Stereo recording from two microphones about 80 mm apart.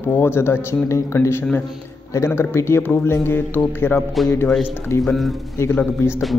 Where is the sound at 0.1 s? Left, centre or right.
Left.